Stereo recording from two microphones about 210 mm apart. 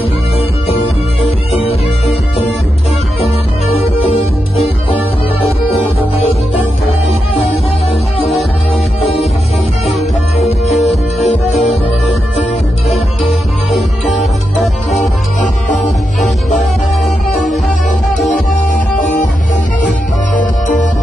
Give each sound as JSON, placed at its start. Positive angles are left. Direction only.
{"t": 10.7, "sound": "music", "side_deg": 0}
{"t": 12.9, "sound": "music", "side_deg": 0}
{"t": 18.9, "sound": "music", "side_deg": 40}